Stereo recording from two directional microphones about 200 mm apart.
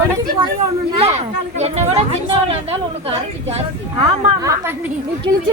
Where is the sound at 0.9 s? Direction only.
30° right (ahead or behind).